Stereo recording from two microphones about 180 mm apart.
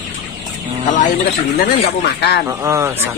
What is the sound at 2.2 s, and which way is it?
Speech, 65° left (ahead or behind).